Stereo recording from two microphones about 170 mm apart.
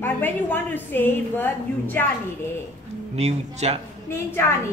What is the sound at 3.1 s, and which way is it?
Speech, 40° right (ahead or behind).